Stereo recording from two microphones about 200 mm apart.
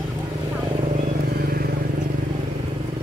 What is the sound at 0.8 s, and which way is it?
Vehicle, 40° right (ahead or behind).